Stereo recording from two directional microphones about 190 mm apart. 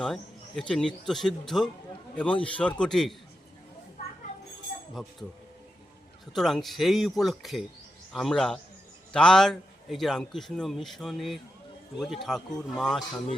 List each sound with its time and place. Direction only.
0.0 s a man's voice: 5° left (ahead or behind)
4.7 s a sound: 45° left (ahead or behind)
6.3 s a man's voice: centre (ahead or behind)